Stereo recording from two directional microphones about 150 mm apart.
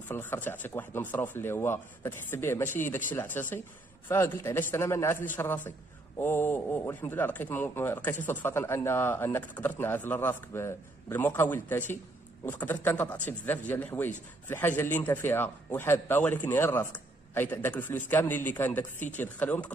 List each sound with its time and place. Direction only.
0.1 s speech: 15° left (ahead or behind)